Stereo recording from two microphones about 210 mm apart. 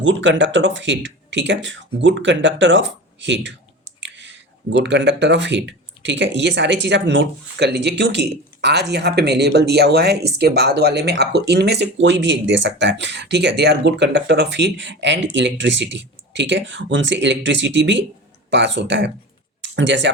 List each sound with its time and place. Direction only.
0.0 s speech: 60° right (ahead or behind)
4.0 s clicking: 60° right (ahead or behind)
4.8 s speech: 55° right (ahead or behind)